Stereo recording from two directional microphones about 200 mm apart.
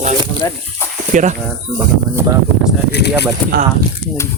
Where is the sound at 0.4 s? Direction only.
15° left (ahead or behind).